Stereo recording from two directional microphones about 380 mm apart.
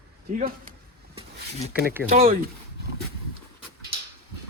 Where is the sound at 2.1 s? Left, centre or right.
Right.